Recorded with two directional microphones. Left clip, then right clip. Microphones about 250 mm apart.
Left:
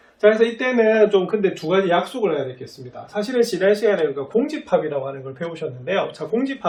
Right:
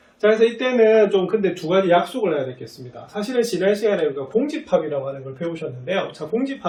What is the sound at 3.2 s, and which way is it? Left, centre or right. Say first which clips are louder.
A man's voice: left 2 dB; centre.